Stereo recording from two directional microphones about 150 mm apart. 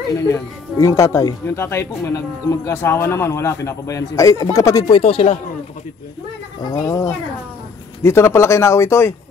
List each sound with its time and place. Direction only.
0.3 s speech: 20° left (ahead or behind)
5.0 s speech: 40° left (ahead or behind)
6.6 s speech: 25° left (ahead or behind)